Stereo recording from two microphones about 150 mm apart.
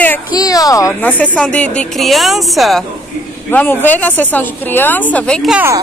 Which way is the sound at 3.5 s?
10° left (ahead or behind).